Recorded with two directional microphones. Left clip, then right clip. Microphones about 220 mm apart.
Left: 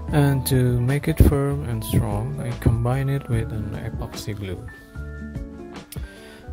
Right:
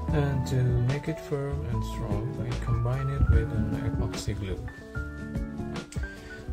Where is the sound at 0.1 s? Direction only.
45° left (ahead or behind).